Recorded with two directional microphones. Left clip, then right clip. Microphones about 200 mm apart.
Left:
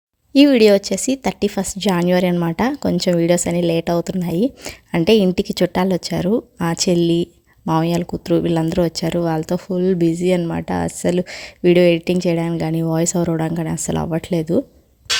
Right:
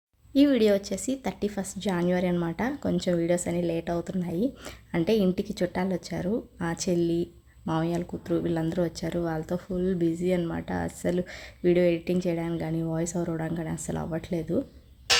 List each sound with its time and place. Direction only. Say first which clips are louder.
0.3 s speech: left 10 dB; 35° left (ahead or behind)